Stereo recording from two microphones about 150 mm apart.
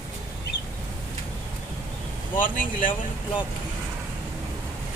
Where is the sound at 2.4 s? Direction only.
65° left (ahead or behind).